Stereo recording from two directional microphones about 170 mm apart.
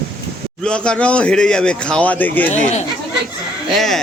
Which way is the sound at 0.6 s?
5° left (ahead or behind).